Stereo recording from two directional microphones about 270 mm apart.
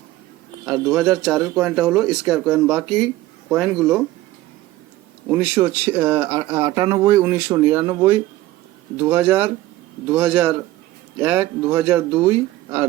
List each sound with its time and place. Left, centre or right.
0.6 s speech: centre
5.3 s speech: centre